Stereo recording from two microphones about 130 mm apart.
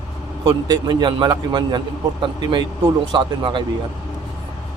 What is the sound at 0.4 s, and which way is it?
A man's voice, 35° right (ahead or behind).